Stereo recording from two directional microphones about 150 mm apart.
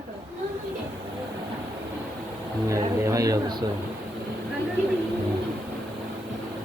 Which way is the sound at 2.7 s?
20° right (ahead or behind).